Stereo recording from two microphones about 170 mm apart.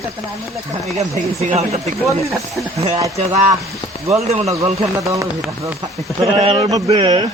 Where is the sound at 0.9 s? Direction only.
40° right (ahead or behind).